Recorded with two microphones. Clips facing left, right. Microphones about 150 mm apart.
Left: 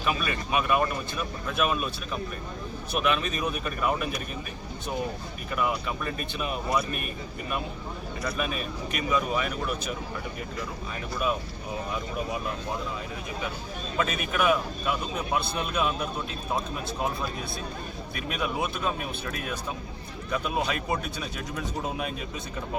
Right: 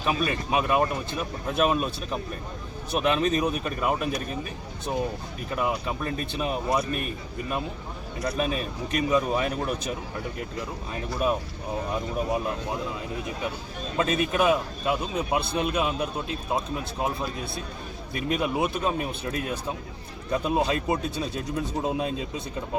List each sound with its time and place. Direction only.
0.0 s speech: 25° right (ahead or behind)
5.5 s speech: 30° right (ahead or behind)
8.2 s speech: 35° right (ahead or behind)
13.9 s speech: 30° right (ahead or behind)
18.1 s speech: 25° right (ahead or behind)